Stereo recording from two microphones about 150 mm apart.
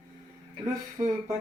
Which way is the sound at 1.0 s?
25° right (ahead or behind).